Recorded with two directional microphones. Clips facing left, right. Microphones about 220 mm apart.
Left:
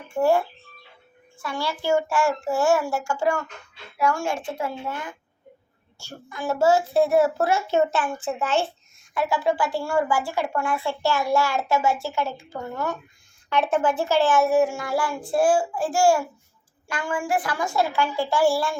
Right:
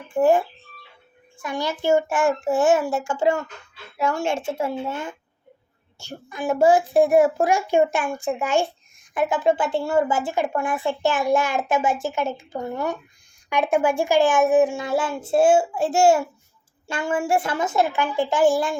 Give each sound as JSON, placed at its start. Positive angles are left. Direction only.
{"t": 0.1, "sound": "a child's voice", "side_deg": -15}